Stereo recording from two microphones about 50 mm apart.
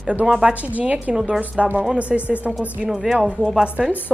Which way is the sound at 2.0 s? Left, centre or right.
Right.